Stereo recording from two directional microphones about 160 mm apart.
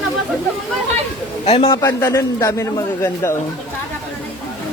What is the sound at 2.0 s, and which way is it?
A man's voice, 20° left (ahead or behind).